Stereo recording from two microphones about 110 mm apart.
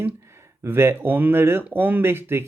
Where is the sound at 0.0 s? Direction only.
20° right (ahead or behind).